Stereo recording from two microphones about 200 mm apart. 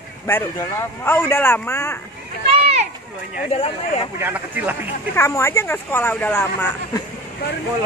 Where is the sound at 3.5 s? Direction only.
30° left (ahead or behind).